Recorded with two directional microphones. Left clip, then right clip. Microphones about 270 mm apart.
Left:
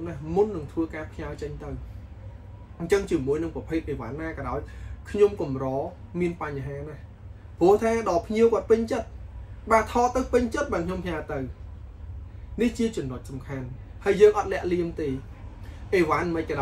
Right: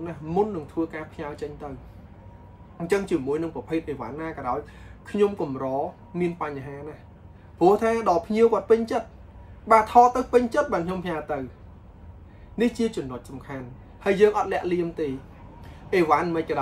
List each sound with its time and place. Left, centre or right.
0.0 s speech: centre
2.9 s speech: centre
7.5 s speech: centre
12.5 s speech: centre